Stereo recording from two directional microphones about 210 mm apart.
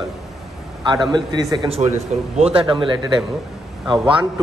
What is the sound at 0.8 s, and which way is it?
A man's voice, 20° right (ahead or behind).